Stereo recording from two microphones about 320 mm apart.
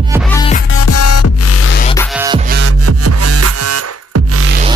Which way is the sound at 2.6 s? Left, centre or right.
Right.